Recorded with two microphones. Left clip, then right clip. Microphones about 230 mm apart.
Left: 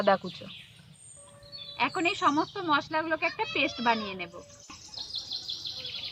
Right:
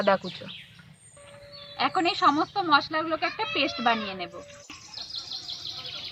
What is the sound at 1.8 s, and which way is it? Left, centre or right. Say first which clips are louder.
Speech: right 4 dB; centre.